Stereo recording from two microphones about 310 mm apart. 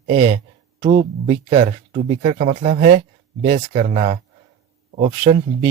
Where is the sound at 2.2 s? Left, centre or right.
Right.